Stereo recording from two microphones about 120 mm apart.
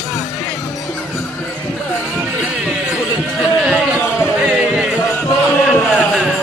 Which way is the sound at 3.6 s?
5° right (ahead or behind).